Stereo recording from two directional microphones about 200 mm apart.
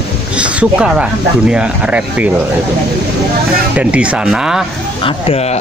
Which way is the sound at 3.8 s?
5° right (ahead or behind).